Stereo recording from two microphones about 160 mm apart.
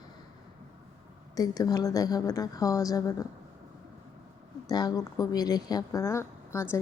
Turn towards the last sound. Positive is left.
turn(degrees=15)  # may be behind; listen again after turning